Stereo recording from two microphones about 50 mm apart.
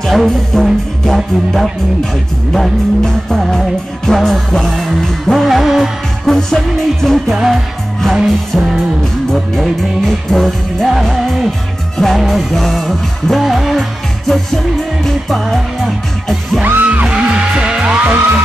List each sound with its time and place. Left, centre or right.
0.0 s music: centre
16.8 s music: right